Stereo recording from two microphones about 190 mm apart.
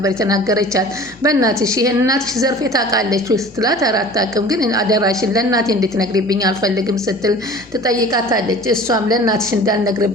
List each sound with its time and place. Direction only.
0.0 s a woman's voice: 15° right (ahead or behind)